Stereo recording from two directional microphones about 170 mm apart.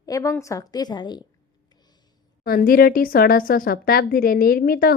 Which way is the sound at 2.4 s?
60° left (ahead or behind).